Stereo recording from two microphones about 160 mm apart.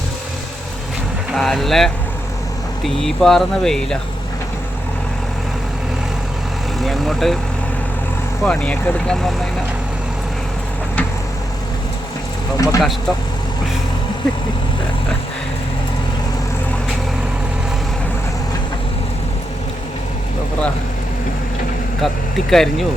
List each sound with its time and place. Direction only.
1.4 s speech: centre (ahead or behind)
6.7 s speech: centre (ahead or behind)
8.4 s speech: 10° left (ahead or behind)
12.5 s speech: 20° left (ahead or behind)
22.0 s speech: centre (ahead or behind)